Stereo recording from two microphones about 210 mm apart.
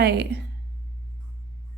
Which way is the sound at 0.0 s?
50° right (ahead or behind).